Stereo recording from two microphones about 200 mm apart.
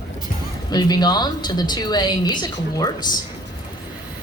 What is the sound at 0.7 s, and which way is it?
A woman's voice, 20° left (ahead or behind).